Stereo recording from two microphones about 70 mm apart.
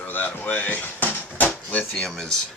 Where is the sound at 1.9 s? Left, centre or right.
Centre.